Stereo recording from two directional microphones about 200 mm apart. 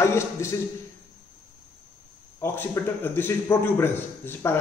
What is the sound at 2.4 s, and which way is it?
A man's voice, 10° left (ahead or behind).